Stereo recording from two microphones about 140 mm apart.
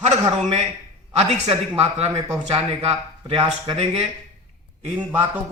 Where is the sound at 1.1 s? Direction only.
45° right (ahead or behind).